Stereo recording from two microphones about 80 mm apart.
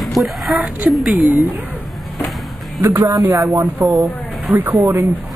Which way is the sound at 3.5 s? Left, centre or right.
Right.